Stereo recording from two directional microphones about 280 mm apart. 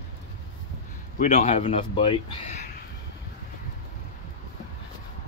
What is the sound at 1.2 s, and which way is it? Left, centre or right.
A man's voice, left.